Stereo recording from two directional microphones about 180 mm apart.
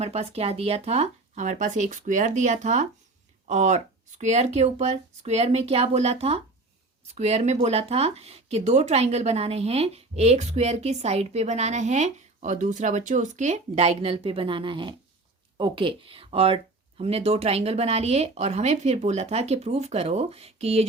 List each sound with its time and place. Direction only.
0.0 s speech: 35° right (ahead or behind)